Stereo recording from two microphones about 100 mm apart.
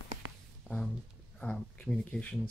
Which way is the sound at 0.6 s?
5° left (ahead or behind).